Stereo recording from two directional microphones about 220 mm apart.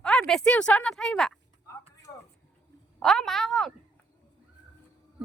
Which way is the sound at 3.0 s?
Centre (ahead or behind).